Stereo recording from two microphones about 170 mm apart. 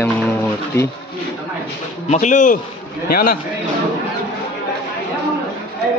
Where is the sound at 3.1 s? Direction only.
60° left (ahead or behind).